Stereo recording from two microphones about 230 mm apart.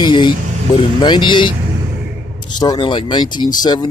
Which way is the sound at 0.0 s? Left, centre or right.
Centre.